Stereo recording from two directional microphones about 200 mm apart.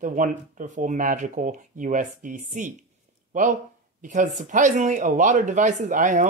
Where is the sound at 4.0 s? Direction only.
40° right (ahead or behind).